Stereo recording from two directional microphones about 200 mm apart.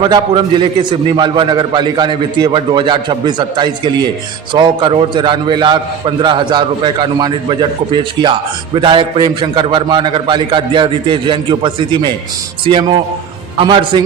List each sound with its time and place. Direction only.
0.0 s a man's voice: 25° right (ahead or behind)